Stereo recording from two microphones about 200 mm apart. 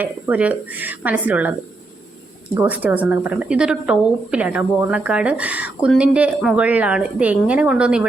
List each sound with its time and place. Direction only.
0.0 s a woman's voice: 5° right (ahead or behind)
2.6 s a woman's voice: 5° right (ahead or behind)